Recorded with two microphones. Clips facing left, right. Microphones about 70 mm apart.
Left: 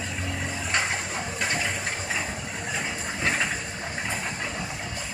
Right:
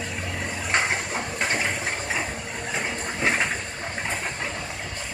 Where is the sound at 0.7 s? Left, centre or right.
Right.